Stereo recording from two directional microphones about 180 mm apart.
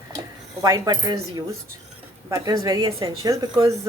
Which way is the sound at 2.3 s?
20° right (ahead or behind).